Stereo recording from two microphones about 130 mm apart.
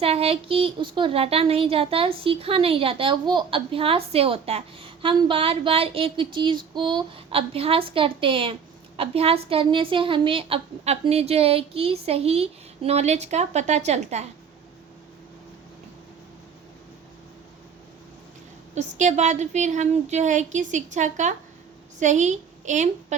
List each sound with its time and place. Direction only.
0.0 s a woman's voice: 50° right (ahead or behind)
18.7 s a woman's voice: 65° right (ahead or behind)